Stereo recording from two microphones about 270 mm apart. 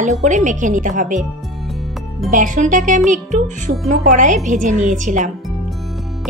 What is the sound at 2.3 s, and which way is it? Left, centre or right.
Speech, right.